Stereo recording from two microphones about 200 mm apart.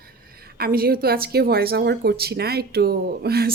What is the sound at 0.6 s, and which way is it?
A woman's voice, 50° right (ahead or behind).